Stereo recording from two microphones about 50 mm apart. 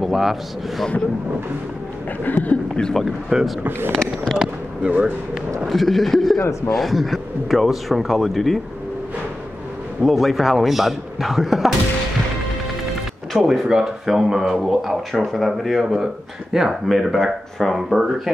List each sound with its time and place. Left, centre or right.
0.0 s speech: centre
2.2 s speech: left
2.7 s speech: centre
3.3 s speech: centre
3.9 s speech: centre
5.7 s speech: centre
10.0 s speech: centre
12.8 s music: centre
13.7 s speech: centre